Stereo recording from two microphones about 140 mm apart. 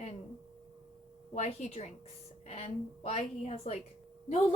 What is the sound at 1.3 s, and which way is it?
A woman's voice, 50° left (ahead or behind).